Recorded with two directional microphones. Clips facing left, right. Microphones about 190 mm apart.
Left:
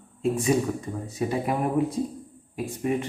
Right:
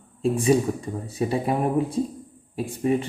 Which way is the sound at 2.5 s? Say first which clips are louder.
Right 3 dB; 30° right (ahead or behind).